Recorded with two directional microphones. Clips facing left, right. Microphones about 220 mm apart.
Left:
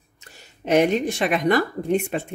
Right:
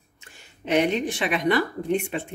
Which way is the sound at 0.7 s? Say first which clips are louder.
Left 4 dB; 45° left (ahead or behind).